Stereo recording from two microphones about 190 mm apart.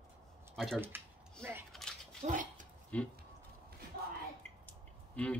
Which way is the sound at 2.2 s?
45° right (ahead or behind).